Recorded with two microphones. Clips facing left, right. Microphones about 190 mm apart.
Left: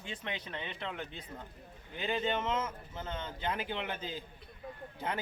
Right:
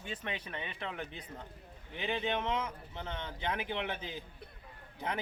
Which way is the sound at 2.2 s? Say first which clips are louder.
Left 1 dB; 15° right (ahead or behind).